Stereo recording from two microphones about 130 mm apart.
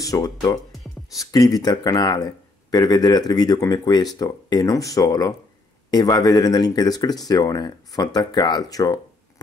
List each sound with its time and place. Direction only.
0.0 s speech: 25° left (ahead or behind)